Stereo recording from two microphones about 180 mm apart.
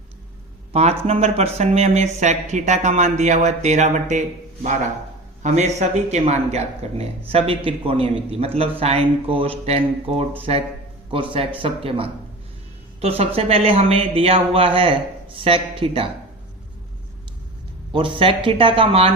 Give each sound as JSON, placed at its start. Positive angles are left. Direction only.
{"t": 0.7, "sound": "speech", "side_deg": -35}
{"t": 5.4, "sound": "speech", "side_deg": -40}
{"t": 17.9, "sound": "speech", "side_deg": -30}